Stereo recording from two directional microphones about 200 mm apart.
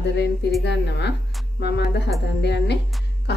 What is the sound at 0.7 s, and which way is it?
A woman's voice, 60° left (ahead or behind).